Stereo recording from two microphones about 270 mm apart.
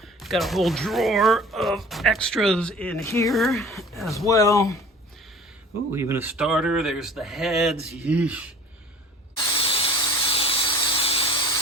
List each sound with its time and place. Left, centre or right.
0.2 s speech: centre
4.3 s speech: centre
5.9 s speech: centre
9.6 s a sound: centre